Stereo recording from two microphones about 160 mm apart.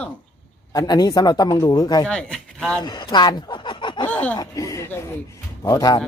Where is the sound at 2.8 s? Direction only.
25° left (ahead or behind).